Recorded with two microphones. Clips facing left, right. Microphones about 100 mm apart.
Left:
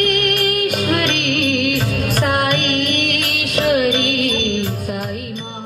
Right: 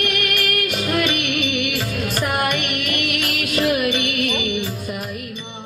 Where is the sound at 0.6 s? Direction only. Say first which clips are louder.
Left 3 dB; 55° left (ahead or behind).